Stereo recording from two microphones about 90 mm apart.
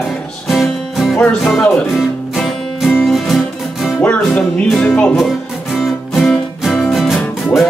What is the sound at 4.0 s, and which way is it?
Music, 15° left (ahead or behind).